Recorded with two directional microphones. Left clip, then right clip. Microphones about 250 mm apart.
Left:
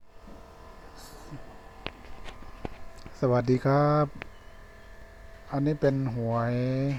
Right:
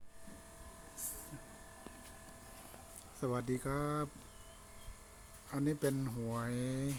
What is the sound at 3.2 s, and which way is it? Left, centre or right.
Speech, centre.